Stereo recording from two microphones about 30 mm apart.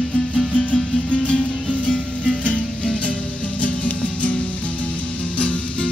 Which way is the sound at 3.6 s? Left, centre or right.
Left.